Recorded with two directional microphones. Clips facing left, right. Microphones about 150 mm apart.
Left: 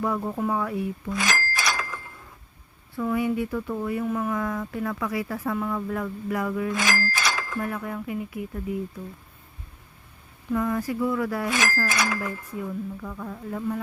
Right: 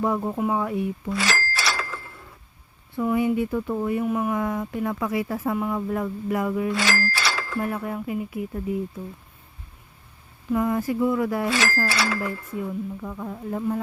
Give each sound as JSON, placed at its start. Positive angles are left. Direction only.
{"t": 0.0, "sound": "speech", "side_deg": -20}
{"t": 1.1, "sound": "bicycle bell", "side_deg": 15}
{"t": 2.9, "sound": "speech", "side_deg": -20}
{"t": 6.7, "sound": "speech", "side_deg": 15}
{"t": 7.1, "sound": "a sound", "side_deg": 15}
{"t": 7.6, "sound": "speech", "side_deg": -25}
{"t": 10.5, "sound": "speech", "side_deg": -20}
{"t": 11.4, "sound": "speech", "side_deg": 15}
{"t": 12.5, "sound": "speech", "side_deg": -20}